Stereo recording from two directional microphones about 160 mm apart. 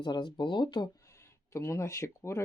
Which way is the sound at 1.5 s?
20° left (ahead or behind).